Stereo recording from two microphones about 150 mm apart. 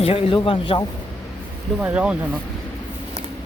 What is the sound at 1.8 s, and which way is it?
Speech, 10° right (ahead or behind).